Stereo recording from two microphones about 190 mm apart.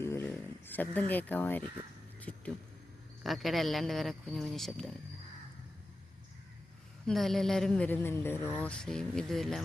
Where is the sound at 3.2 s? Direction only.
Centre (ahead or behind).